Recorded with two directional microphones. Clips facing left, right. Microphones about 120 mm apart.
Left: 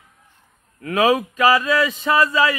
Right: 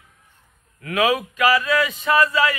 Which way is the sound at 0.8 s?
35° left (ahead or behind).